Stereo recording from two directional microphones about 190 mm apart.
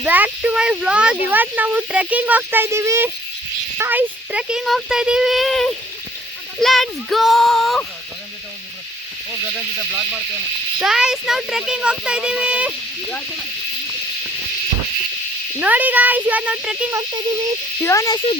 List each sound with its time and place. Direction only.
0.0 s speech: 10° right (ahead or behind)
10.8 s speech: 5° right (ahead or behind)
15.5 s speech: 10° right (ahead or behind)
17.8 s speech: 15° left (ahead or behind)